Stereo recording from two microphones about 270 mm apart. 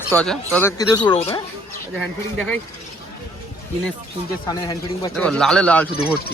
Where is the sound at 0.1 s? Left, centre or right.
Centre; by 1.4 s left.